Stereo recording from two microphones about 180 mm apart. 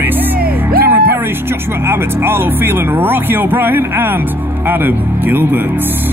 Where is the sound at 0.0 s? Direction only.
10° right (ahead or behind).